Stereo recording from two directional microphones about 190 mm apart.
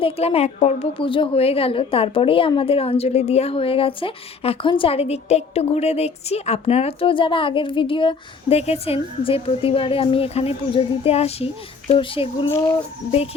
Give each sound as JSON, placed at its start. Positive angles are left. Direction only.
{"t": 0.0, "sound": "a woman's voice", "side_deg": 30}
{"t": 12.5, "sound": "speech", "side_deg": 15}
{"t": 13.1, "sound": "a woman's voice", "side_deg": 30}